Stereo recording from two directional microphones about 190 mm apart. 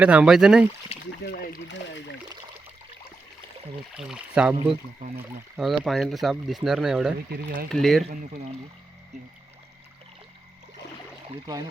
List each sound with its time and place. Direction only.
0.0 s speech: 5° right (ahead or behind)
1.2 s speech: 55° left (ahead or behind)
1.7 s speech: 70° left (ahead or behind)
3.9 s speech: 5° right (ahead or behind)
5.5 s speech: centre (ahead or behind)
7.3 s speech: 50° right (ahead or behind)
7.7 s speech: centre (ahead or behind)
11.3 s speech: 20° right (ahead or behind)